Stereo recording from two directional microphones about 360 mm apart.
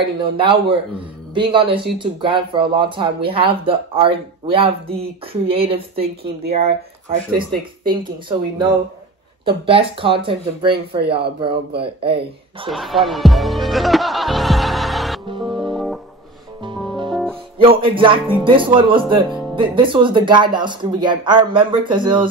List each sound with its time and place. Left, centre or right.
0.0 s a man's voice: centre
12.6 s speech: centre
15.4 s music: centre
17.1 s music: centre
17.6 s a man's voice: centre
19.2 s music: centre
19.5 s a man's voice: centre